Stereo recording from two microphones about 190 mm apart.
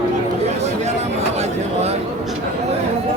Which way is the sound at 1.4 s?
35° right (ahead or behind).